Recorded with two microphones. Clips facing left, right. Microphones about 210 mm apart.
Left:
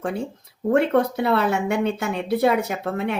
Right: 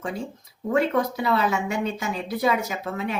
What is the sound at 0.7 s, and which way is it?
A woman's voice, 60° left (ahead or behind).